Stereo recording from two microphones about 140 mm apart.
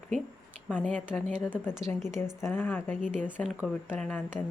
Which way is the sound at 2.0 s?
5° right (ahead or behind).